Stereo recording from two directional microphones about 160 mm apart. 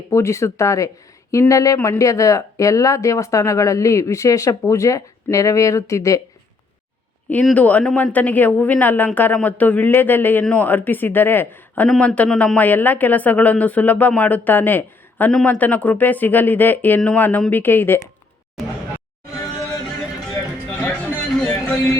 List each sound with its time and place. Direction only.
0.1 s speech: 20° left (ahead or behind)
7.3 s speech: 10° left (ahead or behind)
21.3 s music: 5° left (ahead or behind)